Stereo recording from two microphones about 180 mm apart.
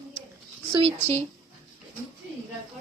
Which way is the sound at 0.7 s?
30° right (ahead or behind).